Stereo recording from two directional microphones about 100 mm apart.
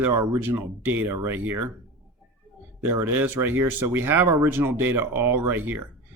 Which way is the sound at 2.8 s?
20° right (ahead or behind).